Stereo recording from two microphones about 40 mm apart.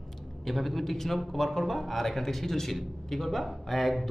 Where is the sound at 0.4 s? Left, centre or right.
Centre.